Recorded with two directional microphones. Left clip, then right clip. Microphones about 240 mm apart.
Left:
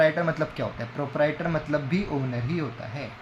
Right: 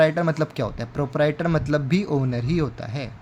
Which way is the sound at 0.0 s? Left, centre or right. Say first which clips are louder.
Right 3 dB; right.